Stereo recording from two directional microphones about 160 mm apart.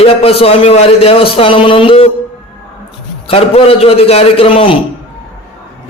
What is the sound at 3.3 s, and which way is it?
A man's voice, 40° left (ahead or behind).